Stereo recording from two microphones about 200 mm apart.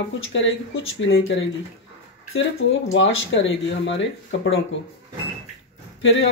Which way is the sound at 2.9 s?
70° left (ahead or behind).